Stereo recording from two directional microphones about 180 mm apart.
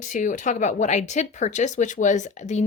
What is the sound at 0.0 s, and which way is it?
Speech, 45° left (ahead or behind).